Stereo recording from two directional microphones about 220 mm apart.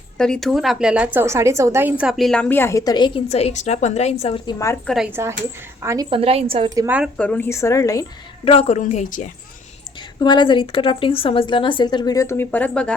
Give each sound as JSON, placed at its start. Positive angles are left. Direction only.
{"t": 0.2, "sound": "a woman's voice", "side_deg": 0}
{"t": 4.9, "sound": "a woman's voice", "side_deg": 5}
{"t": 5.8, "sound": "a woman's voice", "side_deg": -15}
{"t": 6.1, "sound": "a woman's voice", "side_deg": -25}
{"t": 7.2, "sound": "a woman's voice", "side_deg": 5}
{"t": 8.4, "sound": "a woman's voice", "side_deg": 30}
{"t": 10.2, "sound": "a woman's voice", "side_deg": 20}